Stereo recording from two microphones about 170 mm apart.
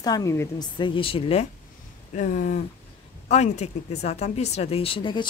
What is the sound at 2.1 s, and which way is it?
Speech, 45° left (ahead or behind).